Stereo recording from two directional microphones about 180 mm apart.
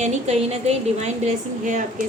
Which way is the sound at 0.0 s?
40° right (ahead or behind).